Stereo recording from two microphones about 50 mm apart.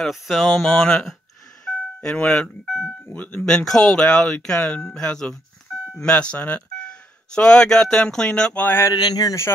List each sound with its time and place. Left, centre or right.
0.0 s speech: centre
0.7 s speech: centre
2.2 s speech: centre
3.1 s speech: left
3.4 s speech: centre
4.6 s speech: left
4.8 s speech: centre
8.7 s speech: left